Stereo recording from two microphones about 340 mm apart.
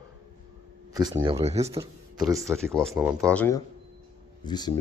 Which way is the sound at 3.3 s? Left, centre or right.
Centre.